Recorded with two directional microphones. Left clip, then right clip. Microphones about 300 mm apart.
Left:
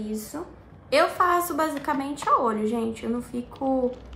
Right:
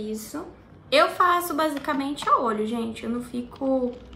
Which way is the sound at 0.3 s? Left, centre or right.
Centre.